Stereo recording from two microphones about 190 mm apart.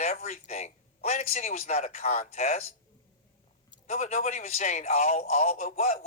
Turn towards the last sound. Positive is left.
turn(degrees=35)  # may be behind; listen again after turning